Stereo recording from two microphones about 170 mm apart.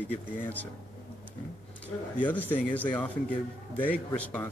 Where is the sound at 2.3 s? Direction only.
10° left (ahead or behind).